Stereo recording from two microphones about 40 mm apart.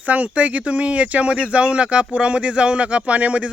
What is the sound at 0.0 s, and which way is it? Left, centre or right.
Speech, right.